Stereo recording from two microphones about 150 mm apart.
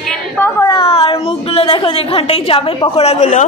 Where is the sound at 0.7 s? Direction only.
35° left (ahead or behind).